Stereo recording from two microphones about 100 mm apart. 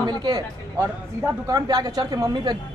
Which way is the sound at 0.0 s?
45° right (ahead or behind).